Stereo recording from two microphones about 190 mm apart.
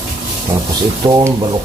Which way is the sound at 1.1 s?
20° right (ahead or behind).